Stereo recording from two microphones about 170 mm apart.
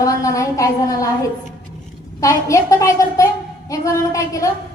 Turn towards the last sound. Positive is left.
turn(degrees=20)  # may be behind; listen again after turning